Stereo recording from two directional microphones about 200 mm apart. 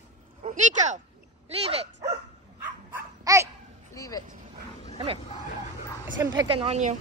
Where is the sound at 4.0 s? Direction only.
15° left (ahead or behind).